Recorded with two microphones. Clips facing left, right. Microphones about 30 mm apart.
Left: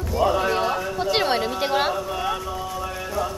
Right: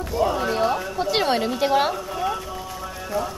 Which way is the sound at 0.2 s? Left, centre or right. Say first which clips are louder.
Left 2 dB; centre.